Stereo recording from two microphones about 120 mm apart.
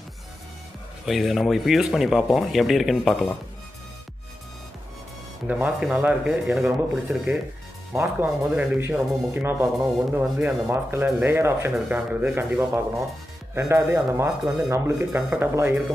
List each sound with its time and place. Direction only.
1.0 s speech: centre (ahead or behind)
5.5 s speech: 5° right (ahead or behind)
7.9 s speech: 20° right (ahead or behind)